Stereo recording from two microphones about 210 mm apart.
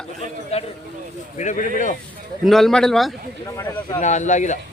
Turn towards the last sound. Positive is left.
turn(degrees=35)  # may be behind; listen again after turning